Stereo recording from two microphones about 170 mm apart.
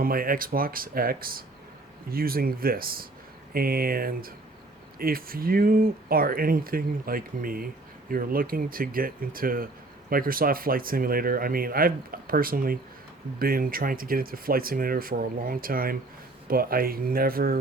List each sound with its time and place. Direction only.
0.0 s speech: 60° right (ahead or behind)